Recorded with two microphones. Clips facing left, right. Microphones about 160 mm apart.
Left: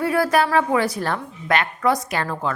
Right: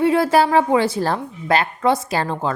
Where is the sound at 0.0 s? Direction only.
25° right (ahead or behind).